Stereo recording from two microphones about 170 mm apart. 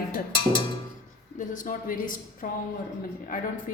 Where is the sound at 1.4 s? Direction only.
50° left (ahead or behind).